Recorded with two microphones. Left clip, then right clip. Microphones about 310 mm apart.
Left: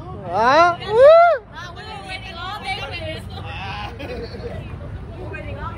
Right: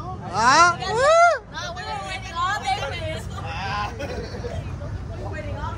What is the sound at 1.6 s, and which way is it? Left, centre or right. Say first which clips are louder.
Hubbub: right 4 dB; centre.